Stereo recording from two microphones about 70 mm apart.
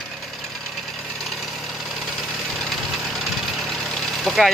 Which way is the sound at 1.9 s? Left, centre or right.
Centre.